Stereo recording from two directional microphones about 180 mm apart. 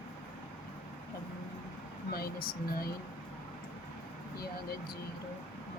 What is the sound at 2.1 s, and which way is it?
Speech, 55° left (ahead or behind).